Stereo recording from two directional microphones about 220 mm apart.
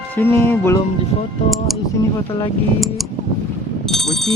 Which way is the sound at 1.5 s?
Centre (ahead or behind).